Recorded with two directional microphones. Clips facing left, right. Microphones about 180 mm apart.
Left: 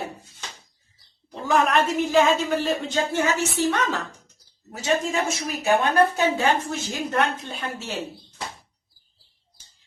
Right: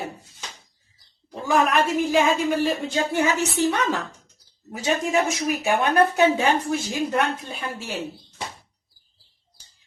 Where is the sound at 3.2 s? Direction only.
15° right (ahead or behind).